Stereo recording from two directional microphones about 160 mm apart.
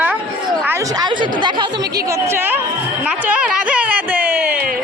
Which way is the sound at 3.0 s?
10° right (ahead or behind).